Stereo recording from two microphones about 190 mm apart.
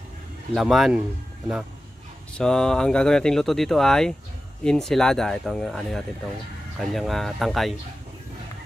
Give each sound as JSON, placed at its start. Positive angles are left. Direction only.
{"t": 0.6, "sound": "speech", "side_deg": 0}
{"t": 2.3, "sound": "speech", "side_deg": 5}